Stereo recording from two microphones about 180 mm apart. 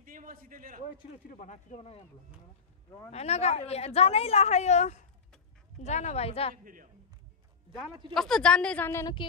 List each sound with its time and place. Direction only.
0.0 s a man's voice: 50° right (ahead or behind)
1.3 s speech: 45° left (ahead or behind)
3.1 s a woman's voice: 35° left (ahead or behind)
6.5 s a man's voice: 50° right (ahead or behind)
8.1 s a woman's voice: 5° left (ahead or behind)